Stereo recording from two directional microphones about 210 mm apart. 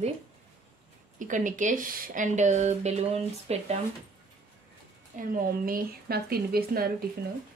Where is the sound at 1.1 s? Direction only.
40° right (ahead or behind).